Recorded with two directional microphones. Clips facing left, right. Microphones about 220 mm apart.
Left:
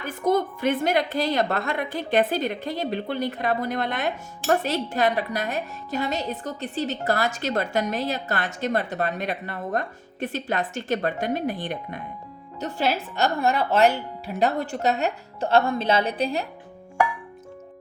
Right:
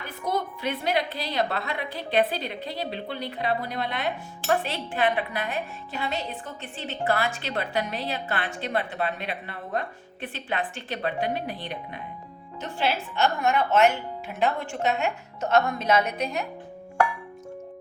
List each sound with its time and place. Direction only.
0.0 s a woman's voice: 50° left (ahead or behind); by 16.5 s 30° left (ahead or behind)